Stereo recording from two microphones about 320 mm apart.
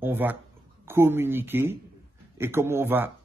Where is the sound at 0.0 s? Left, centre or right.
Centre.